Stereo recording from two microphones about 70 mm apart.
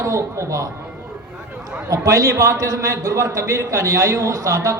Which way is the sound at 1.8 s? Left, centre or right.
Right.